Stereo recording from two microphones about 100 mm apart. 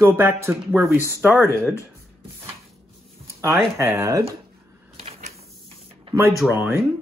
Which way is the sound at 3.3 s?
30° right (ahead or behind).